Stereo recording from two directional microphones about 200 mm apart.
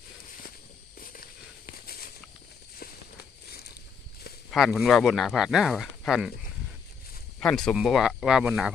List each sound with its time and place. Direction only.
0.9 s a sound: 45° left (ahead or behind)
4.5 s speech: centre (ahead or behind)
7.3 s speech: 5° left (ahead or behind)